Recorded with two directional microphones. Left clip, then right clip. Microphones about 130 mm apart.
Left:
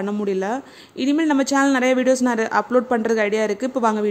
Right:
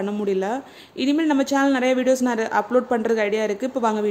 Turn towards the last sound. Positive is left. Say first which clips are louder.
# left 2 dB
turn(degrees=20)  # may be behind; listen again after turning